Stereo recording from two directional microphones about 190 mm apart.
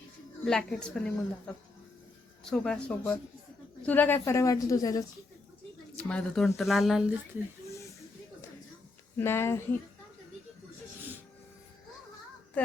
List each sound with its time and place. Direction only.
0.4 s a woman's voice: 5° left (ahead or behind); by 5.0 s 20° left (ahead or behind)
6.0 s speech: 5° left (ahead or behind)
9.1 s a woman's voice: 15° left (ahead or behind)